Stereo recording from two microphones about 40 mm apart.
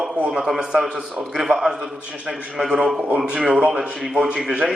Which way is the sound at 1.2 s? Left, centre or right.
Centre.